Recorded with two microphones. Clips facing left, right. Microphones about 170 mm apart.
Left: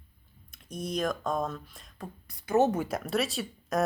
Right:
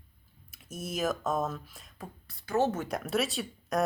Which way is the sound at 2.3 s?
20° left (ahead or behind).